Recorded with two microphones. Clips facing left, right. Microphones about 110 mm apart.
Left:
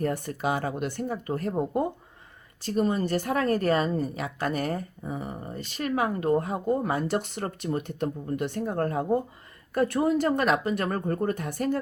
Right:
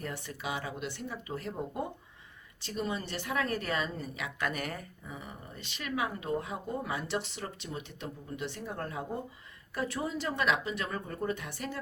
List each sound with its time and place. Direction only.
0.0 s speech: 45° left (ahead or behind)